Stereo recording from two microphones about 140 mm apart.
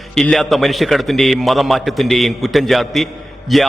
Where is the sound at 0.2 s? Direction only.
Centre (ahead or behind).